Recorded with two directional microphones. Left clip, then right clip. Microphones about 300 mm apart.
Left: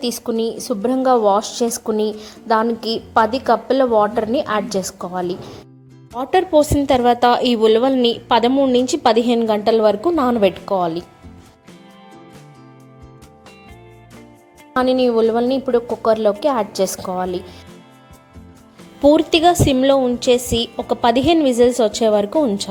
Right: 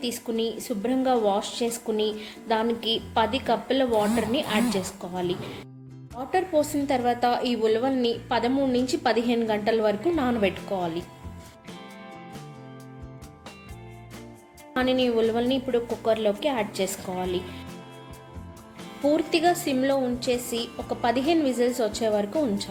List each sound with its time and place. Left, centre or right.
0.0 s a woman's voice: left
14.8 s a woman's voice: left
19.0 s a woman's voice: left